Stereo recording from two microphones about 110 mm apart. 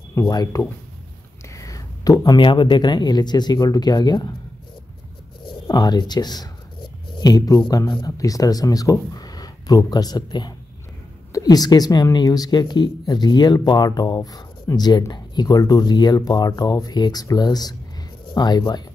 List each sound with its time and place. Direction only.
0.3 s speech: 30° left (ahead or behind)
1.5 s a sound: 30° left (ahead or behind)
2.4 s speech: 45° left (ahead or behind)
5.5 s speech: 40° left (ahead or behind)